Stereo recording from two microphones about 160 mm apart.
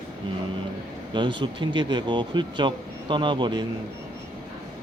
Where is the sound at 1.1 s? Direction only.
30° right (ahead or behind).